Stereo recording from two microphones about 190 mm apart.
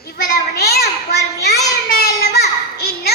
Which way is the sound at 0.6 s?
60° left (ahead or behind).